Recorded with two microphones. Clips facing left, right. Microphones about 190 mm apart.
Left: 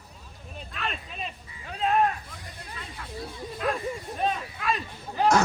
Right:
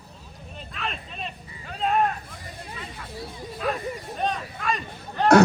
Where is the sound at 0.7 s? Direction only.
Centre (ahead or behind).